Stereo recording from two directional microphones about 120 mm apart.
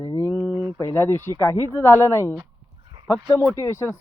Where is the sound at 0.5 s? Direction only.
25° right (ahead or behind).